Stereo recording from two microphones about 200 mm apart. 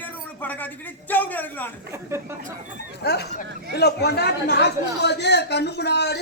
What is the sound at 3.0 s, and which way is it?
Speech, 55° left (ahead or behind).